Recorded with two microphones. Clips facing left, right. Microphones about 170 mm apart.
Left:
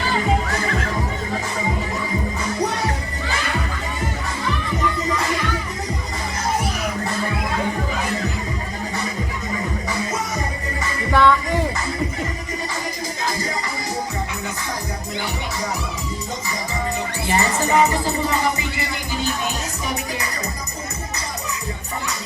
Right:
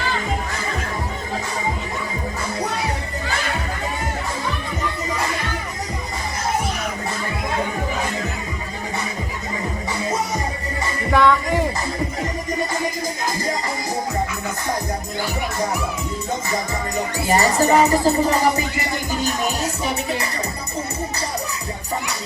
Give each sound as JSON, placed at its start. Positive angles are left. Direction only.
{"t": 11.1, "sound": "music", "side_deg": -5}
{"t": 17.2, "sound": "music", "side_deg": -35}